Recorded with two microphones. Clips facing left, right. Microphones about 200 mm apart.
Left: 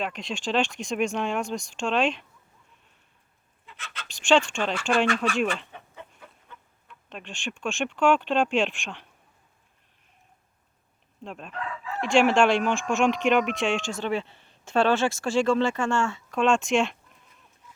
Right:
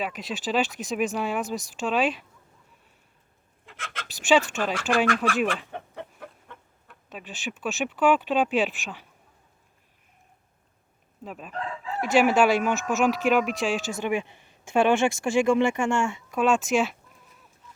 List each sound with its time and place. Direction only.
0.0 s speech: 5° right (ahead or behind)
3.7 s speech: 50° right (ahead or behind)
4.1 s speech: 5° right (ahead or behind)
5.7 s chicken: 60° right (ahead or behind)
7.1 s speech: 5° right (ahead or behind)
11.2 s speech: 5° right (ahead or behind)
11.5 s chicken: 30° right (ahead or behind)
11.9 s speech: 5° right (ahead or behind)